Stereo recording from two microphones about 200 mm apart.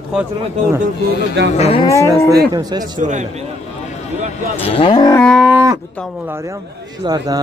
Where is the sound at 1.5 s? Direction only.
30° left (ahead or behind).